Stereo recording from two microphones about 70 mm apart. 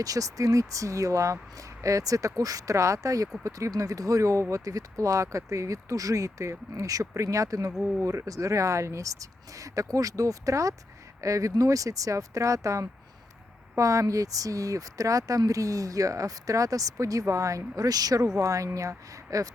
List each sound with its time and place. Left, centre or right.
0.0 s speech: right